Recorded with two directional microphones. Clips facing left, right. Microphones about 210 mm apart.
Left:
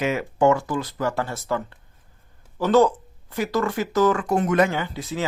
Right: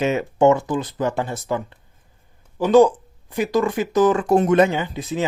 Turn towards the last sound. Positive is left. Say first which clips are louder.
# right 3 dB
turn(degrees=-20)  # may be behind; listen again after turning